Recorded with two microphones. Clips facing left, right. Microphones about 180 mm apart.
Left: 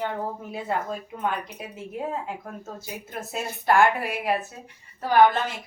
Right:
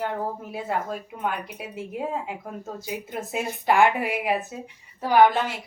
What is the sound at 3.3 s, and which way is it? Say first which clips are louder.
A woman's voice: left 1 dB; 15° right (ahead or behind).